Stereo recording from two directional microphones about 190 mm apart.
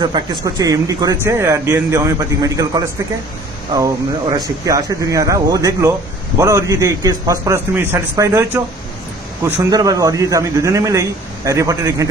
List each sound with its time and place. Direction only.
0.0 s speech: 25° right (ahead or behind)
4.4 s speech: 20° right (ahead or behind)